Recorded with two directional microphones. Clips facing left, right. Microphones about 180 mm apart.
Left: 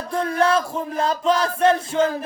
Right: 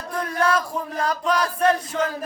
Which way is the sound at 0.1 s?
25° left (ahead or behind).